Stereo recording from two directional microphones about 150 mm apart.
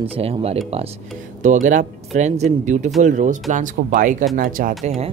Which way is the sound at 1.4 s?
55° right (ahead or behind).